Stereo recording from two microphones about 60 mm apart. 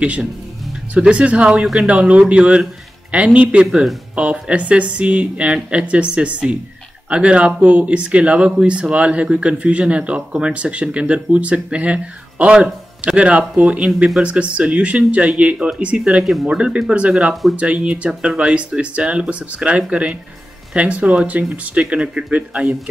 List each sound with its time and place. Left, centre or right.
0.0 s speech: right